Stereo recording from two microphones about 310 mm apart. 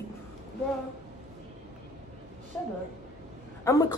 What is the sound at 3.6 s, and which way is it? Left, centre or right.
Speech, centre.